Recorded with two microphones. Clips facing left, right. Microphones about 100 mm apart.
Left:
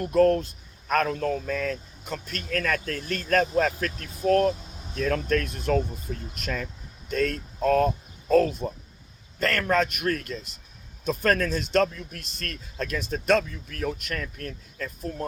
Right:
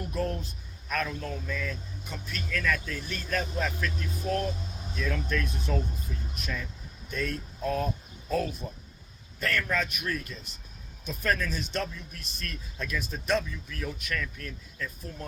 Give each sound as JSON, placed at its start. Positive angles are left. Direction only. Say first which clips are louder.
{"t": 0.0, "sound": "speech", "louder": "left 12 dB", "side_deg": 65}
{"t": 6.1, "sound": "speech", "louder": "left 5 dB", "side_deg": 45}
{"t": 7.1, "sound": "speech", "louder": "left 7 dB", "side_deg": 65}
{"t": 9.4, "sound": "speech", "louder": "left 6 dB", "side_deg": 65}
{"t": 11.5, "sound": "a man's voice", "louder": "left 10 dB", "side_deg": 85}
{"t": 11.9, "sound": "speech", "louder": "left 4 dB", "side_deg": 60}
{"t": 13.4, "sound": "speech", "louder": "left 6 dB", "side_deg": 50}